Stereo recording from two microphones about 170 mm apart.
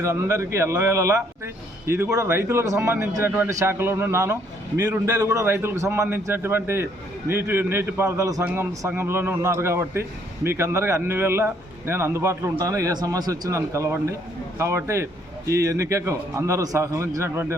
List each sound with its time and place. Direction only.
0.0 s a man's voice: 15° right (ahead or behind)